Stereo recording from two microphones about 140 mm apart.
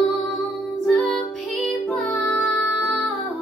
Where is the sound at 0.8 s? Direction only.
5° left (ahead or behind).